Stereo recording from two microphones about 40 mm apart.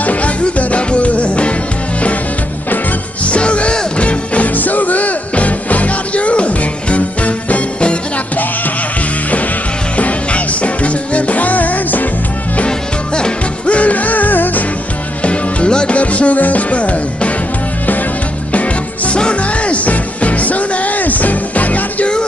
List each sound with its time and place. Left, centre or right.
0.0 s music: left
3.3 s music: left
4.6 s music: left
9.9 s music: left
12.6 s music: left
15.2 s music: left
18.5 s music: left